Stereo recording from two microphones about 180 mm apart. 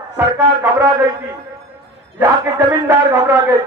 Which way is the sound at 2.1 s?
15° right (ahead or behind).